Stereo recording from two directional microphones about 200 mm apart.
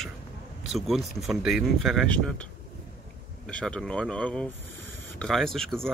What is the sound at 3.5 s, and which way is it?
Speech, 5° left (ahead or behind).